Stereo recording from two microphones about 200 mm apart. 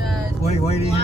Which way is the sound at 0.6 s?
30° left (ahead or behind).